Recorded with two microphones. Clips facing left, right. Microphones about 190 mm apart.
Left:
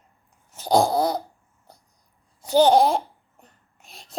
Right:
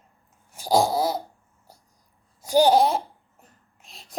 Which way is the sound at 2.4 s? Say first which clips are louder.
Left 1 dB; 10° right (ahead or behind).